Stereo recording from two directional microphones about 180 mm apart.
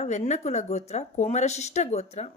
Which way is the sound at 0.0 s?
40° left (ahead or behind).